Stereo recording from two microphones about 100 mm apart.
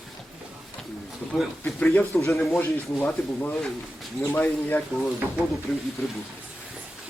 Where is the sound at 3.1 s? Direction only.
10° left (ahead or behind).